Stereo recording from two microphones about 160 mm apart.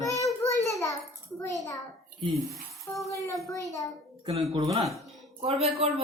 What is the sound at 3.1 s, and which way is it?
Speech, 20° left (ahead or behind).